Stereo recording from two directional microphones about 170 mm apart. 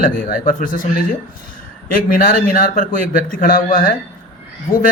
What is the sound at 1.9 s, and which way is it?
Speech, 55° left (ahead or behind).